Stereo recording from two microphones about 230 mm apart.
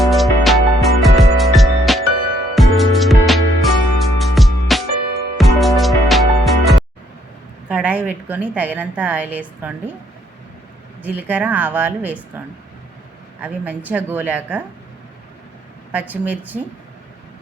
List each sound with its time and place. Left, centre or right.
0.0 s music: centre
4.9 s music: right
5.4 s music: centre
7.7 s a woman's voice: centre
11.0 s a woman's voice: centre
13.4 s a woman's voice: centre
15.9 s a woman's voice: centre